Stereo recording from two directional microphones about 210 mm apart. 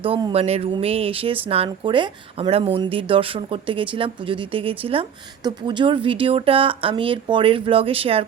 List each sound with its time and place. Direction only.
0.0 s speech: 25° right (ahead or behind)